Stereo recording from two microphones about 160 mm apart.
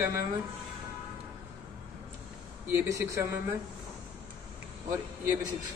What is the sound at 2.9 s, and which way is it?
Speech, 20° right (ahead or behind).